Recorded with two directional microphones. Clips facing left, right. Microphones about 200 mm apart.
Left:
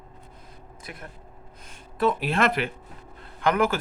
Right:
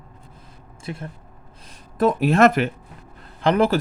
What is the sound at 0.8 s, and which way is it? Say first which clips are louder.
Speech: right 9 dB; 25° right (ahead or behind).